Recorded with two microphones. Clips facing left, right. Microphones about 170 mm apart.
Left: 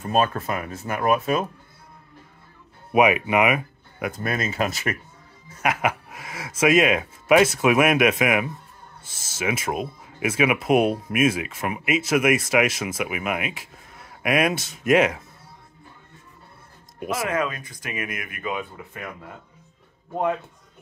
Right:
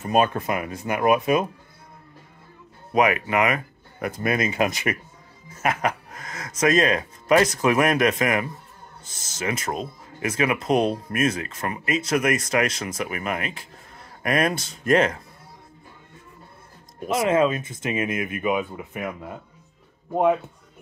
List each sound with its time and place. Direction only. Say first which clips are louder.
0.0 s speech: right 1 dB; 15° right (ahead or behind)
2.9 s speech: left 2 dB; 15° left (ahead or behind)
4.1 s speech: right 5 dB; 10° right (ahead or behind)
5.6 s speech: even; 5° left (ahead or behind)
17.1 s speech: right 6 dB; 25° right (ahead or behind)